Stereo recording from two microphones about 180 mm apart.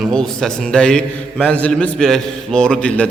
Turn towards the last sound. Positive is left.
turn(degrees=5)  # may be behind; listen again after turning